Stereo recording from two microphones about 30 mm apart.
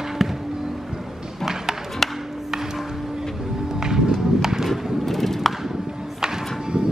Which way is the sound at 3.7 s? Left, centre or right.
Right.